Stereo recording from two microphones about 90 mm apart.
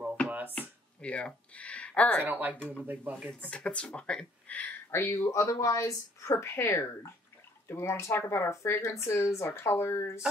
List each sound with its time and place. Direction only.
0.3 s a sound: 20° right (ahead or behind)
0.6 s a sound: 15° left (ahead or behind)
2.2 s speech: 20° right (ahead or behind)
2.5 s speech: 15° left (ahead or behind)
2.8 s speech: 20° right (ahead or behind)
3.3 s speech: 15° left (ahead or behind)
4.9 s speech: 30° left (ahead or behind)